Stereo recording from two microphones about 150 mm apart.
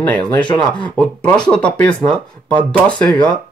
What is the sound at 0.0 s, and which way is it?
Speech, 10° left (ahead or behind).